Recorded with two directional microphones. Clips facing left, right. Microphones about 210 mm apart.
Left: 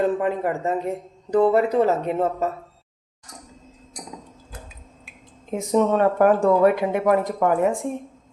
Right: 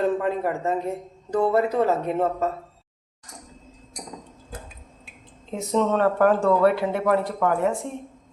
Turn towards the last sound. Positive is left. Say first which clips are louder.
# left 3 dB
turn(degrees=15)  # may be behind; listen again after turning